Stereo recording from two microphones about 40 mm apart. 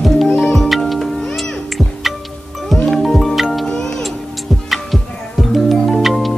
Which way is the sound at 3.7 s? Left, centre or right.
Centre.